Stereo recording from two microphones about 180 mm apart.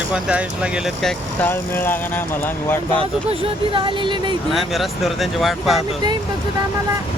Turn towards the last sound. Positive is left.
turn(degrees=0)  # may be behind; listen again after turning